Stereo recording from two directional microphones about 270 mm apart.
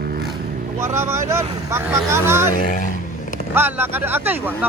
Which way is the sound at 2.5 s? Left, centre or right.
Left.